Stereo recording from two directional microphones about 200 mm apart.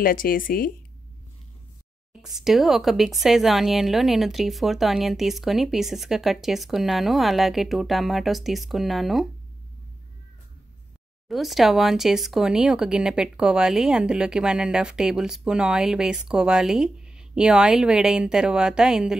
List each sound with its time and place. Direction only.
0.0 s speech: 45° left (ahead or behind)
2.2 s speech: centre (ahead or behind)
11.2 s speech: centre (ahead or behind)